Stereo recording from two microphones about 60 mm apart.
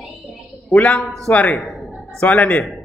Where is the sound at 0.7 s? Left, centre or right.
Left.